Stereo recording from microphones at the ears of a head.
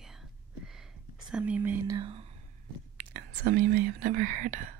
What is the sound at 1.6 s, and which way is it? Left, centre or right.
Speech, right.